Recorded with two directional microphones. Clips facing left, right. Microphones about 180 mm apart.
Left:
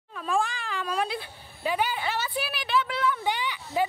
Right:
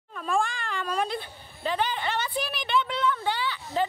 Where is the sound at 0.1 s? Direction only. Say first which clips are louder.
Even; centre (ahead or behind).